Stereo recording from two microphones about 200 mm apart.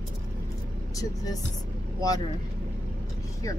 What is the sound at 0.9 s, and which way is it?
Speech, 20° left (ahead or behind).